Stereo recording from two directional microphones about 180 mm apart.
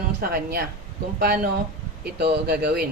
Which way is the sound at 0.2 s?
55° right (ahead or behind).